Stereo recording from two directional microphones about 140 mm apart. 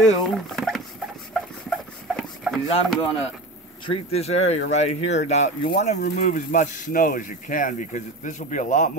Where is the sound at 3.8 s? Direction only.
40° left (ahead or behind).